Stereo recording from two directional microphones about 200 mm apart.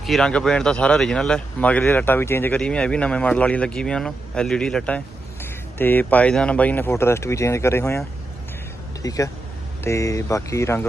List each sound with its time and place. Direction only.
0.0 s speech: centre (ahead or behind)